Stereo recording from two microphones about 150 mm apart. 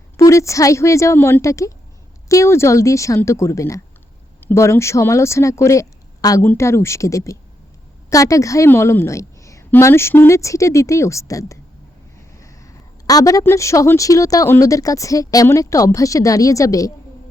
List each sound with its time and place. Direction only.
0.2 s speech: 20° left (ahead or behind)